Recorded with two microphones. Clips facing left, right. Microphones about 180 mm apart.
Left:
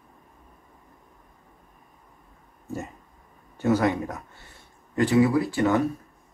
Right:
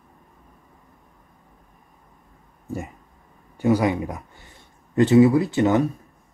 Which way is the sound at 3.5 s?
10° right (ahead or behind).